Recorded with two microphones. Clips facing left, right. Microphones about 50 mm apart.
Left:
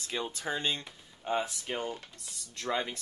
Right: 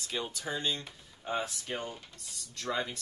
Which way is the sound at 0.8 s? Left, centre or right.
Left.